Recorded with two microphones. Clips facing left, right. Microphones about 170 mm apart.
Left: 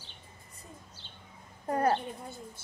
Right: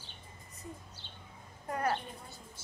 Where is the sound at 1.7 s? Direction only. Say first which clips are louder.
Left 6 dB; 35° left (ahead or behind).